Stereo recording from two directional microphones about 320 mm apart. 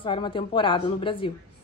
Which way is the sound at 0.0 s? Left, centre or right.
Centre.